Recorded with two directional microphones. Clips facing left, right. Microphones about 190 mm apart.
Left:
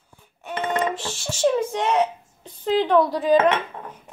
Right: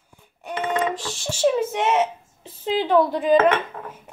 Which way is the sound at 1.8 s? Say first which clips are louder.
Even; centre (ahead or behind).